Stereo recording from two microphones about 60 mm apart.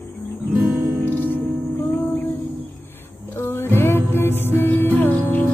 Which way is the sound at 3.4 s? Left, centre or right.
Left.